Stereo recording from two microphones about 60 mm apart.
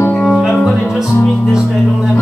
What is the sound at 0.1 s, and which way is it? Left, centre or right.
Music, centre.